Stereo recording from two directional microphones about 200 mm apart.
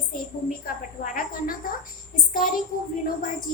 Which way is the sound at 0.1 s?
45° left (ahead or behind).